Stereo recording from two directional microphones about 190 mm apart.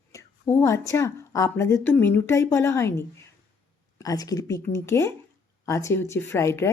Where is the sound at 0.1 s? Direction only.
15° left (ahead or behind).